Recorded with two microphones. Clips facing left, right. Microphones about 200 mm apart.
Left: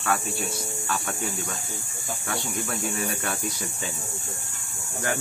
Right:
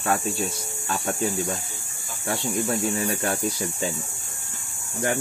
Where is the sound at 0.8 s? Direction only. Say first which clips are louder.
Right 6 dB; 25° right (ahead or behind).